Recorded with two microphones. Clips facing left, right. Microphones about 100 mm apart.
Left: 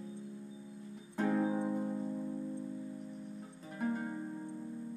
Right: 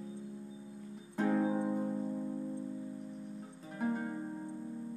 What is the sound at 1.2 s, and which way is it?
Music, 10° right (ahead or behind).